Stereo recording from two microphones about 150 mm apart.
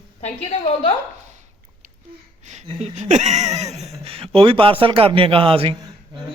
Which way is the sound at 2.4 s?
50° right (ahead or behind).